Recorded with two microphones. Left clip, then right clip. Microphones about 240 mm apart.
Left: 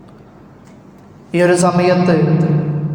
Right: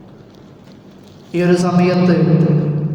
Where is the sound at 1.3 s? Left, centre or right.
Left.